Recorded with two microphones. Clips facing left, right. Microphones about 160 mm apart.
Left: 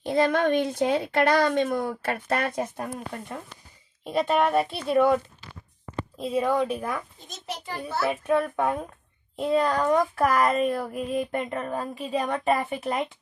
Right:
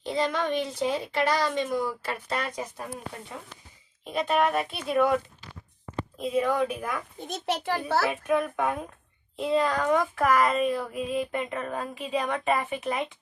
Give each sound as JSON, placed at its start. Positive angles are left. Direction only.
{"t": 0.0, "sound": "a woman's voice", "side_deg": 55}
{"t": 4.0, "sound": "speech", "side_deg": 40}
{"t": 6.1, "sound": "speech", "side_deg": 30}
{"t": 7.2, "sound": "a child's voice", "side_deg": -60}
{"t": 8.0, "sound": "speech", "side_deg": 30}
{"t": 9.3, "sound": "a child's voice", "side_deg": 45}